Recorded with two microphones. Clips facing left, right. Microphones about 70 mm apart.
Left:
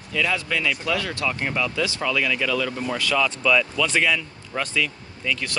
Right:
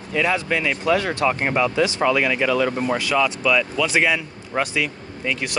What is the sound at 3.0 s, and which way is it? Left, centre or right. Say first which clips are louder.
Speech: right 2 dB; centre.